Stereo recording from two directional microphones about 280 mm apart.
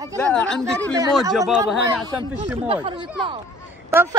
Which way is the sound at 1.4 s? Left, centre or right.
Centre.